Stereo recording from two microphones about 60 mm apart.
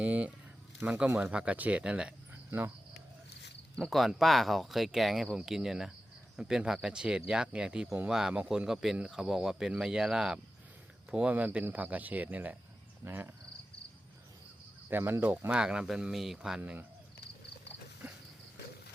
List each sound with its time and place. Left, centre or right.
0.0 s speech: right
2.3 s cricket: right
3.8 s speech: centre; by 12.5 s right
13.1 s speech: right
14.8 s speech: right
15.4 s speech: centre